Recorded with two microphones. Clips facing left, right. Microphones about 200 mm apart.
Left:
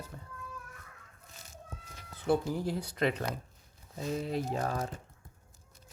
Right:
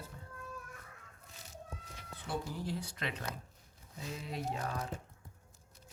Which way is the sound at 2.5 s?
45° left (ahead or behind).